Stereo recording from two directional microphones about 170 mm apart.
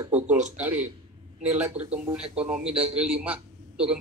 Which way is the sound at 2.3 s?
5° right (ahead or behind).